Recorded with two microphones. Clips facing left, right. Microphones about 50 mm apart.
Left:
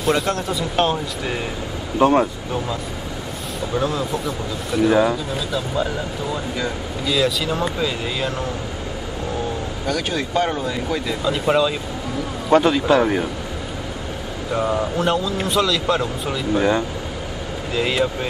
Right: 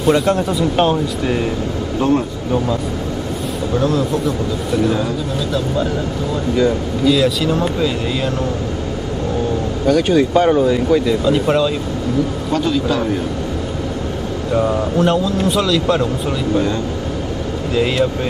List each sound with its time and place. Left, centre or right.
0.0 s a man's voice: centre
2.0 s a man's voice: left
3.7 s a man's voice: centre
6.5 s a man's voice: centre
9.8 s a man's voice: centre
12.4 s a man's voice: left
14.5 s a man's voice: centre
17.7 s a man's voice: centre